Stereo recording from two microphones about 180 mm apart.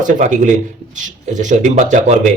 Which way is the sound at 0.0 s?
45° right (ahead or behind).